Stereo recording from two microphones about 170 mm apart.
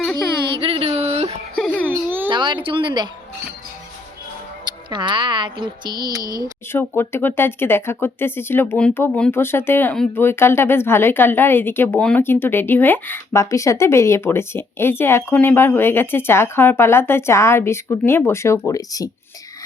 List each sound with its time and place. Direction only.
0.6 s a sound: 35° right (ahead or behind)
1.5 s baby cry: 5° left (ahead or behind)
2.3 s speech: 30° right (ahead or behind)
4.9 s speech: 25° right (ahead or behind)
6.4 s speech: 15° left (ahead or behind)